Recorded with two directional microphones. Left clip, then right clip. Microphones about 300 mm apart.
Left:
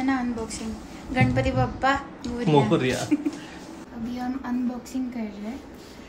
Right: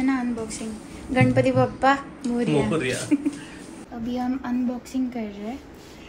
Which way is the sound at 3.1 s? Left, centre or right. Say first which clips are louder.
Right 2 dB; centre.